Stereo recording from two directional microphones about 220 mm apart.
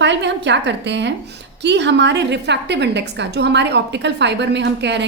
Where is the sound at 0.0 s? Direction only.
55° right (ahead or behind).